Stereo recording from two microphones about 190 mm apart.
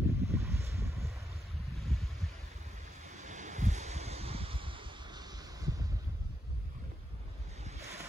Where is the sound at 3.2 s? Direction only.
40° right (ahead or behind); by 5.7 s 20° right (ahead or behind).